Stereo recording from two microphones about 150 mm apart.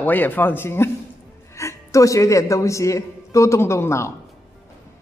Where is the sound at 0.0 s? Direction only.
10° left (ahead or behind).